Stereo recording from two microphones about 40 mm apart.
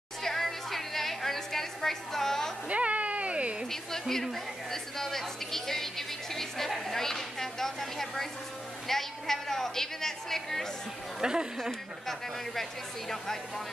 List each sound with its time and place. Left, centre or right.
0.2 s a sound: centre
2.7 s cat: right
4.1 s a woman's voice: centre
11.1 s speech: centre